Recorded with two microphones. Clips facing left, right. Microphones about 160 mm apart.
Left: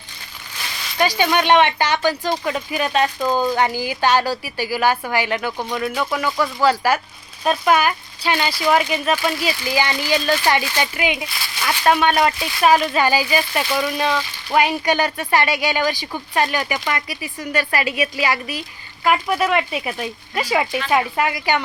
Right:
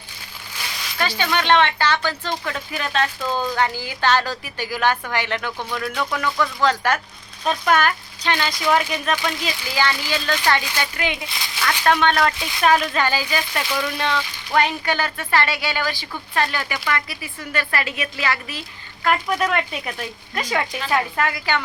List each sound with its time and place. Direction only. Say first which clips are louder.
0.9 s speech: left 5 dB; 15° left (ahead or behind)
5.9 s speech: left 2 dB; 5° left (ahead or behind)
11.3 s speech: left 1 dB; 20° right (ahead or behind)
11.6 s speech: left 2 dB; 10° left (ahead or behind)